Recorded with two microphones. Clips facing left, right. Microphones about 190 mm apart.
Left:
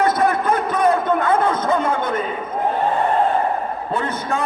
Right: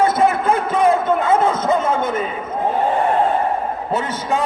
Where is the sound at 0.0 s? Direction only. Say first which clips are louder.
Right 2 dB; 25° right (ahead or behind).